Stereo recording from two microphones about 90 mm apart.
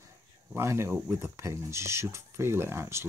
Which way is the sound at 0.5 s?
30° right (ahead or behind).